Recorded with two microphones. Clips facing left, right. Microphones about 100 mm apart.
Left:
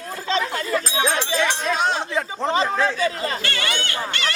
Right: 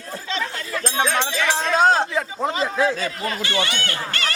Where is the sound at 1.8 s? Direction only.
40° right (ahead or behind).